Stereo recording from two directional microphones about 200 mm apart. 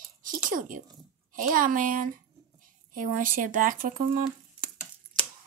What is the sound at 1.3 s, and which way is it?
Speech, 40° right (ahead or behind).